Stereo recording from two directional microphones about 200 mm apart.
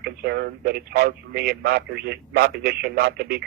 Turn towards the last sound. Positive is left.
turn(degrees=-55)  # may be behind; listen again after turning